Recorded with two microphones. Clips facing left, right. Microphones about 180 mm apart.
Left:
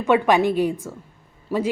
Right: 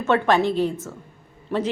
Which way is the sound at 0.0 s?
15° left (ahead or behind).